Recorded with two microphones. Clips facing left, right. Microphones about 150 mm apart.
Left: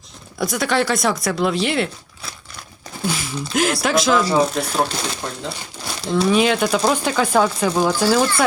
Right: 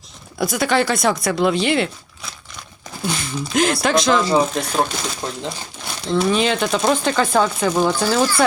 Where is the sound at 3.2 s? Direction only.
5° left (ahead or behind).